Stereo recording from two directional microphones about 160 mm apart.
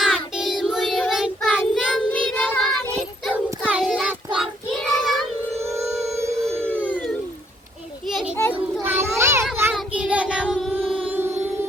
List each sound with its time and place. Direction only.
0.0 s child singing: centre (ahead or behind)
6.1 s music: 20° right (ahead or behind)
6.9 s a sound: 5° left (ahead or behind)
8.1 s children playing: 5° right (ahead or behind)
8.9 s a sound: 15° right (ahead or behind)
9.7 s child singing: 5° right (ahead or behind)